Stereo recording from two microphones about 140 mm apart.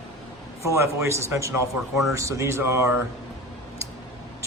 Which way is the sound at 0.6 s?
20° right (ahead or behind).